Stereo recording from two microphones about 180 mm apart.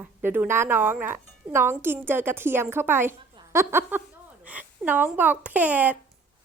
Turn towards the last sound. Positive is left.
turn(degrees=-10)  # may be behind; listen again after turning